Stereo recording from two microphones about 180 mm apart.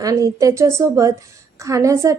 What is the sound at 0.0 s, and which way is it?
A woman's voice, 20° right (ahead or behind).